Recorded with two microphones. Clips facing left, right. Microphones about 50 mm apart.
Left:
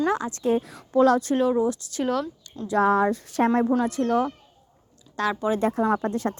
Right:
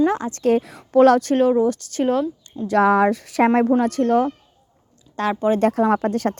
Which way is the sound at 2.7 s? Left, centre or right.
Right.